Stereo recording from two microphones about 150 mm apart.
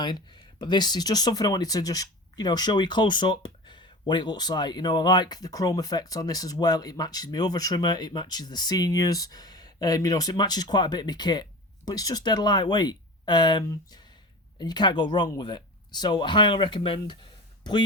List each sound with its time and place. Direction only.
0.0 s speech: 30° left (ahead or behind)